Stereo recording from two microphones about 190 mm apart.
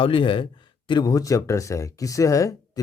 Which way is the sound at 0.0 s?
25° left (ahead or behind).